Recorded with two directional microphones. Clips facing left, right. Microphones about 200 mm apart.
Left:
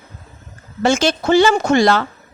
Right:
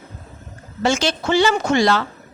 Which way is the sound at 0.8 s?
45° left (ahead or behind).